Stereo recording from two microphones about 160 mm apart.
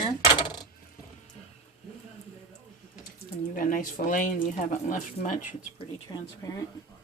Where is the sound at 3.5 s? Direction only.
60° left (ahead or behind).